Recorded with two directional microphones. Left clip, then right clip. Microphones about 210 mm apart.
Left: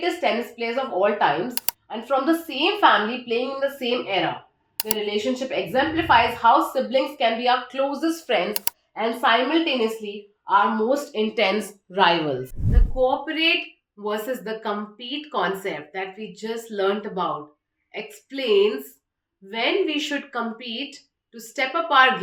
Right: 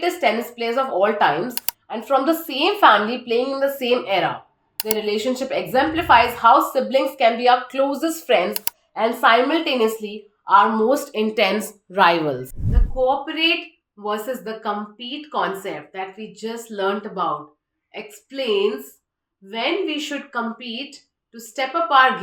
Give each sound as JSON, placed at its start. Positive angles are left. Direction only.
{"t": 0.0, "sound": "a woman's voice", "side_deg": -45}
{"t": 12.5, "sound": "speech", "side_deg": 0}